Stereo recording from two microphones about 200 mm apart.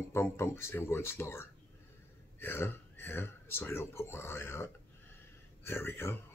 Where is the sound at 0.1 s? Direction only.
10° left (ahead or behind).